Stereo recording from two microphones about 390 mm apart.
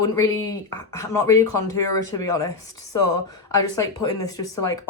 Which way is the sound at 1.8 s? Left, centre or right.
Left.